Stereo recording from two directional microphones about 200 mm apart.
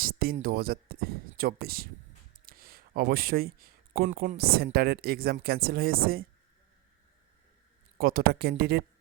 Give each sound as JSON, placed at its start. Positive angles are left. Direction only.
{"t": 0.0, "sound": "a sound", "side_deg": -50}
{"t": 0.3, "sound": "speech", "side_deg": -45}
{"t": 7.9, "sound": "speech", "side_deg": -45}